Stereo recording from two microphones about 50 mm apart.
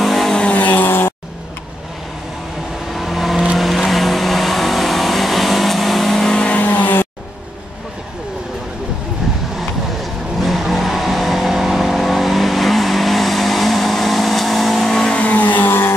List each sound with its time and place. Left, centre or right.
0.0 s vehicle: centre
0.4 s vehicle: left
0.8 s vehicle: left
2.9 s vehicle: centre
6.3 s vehicle: left
6.6 s vehicle: left
9.6 s vehicle: centre
15.1 s vehicle: left
15.6 s vehicle: left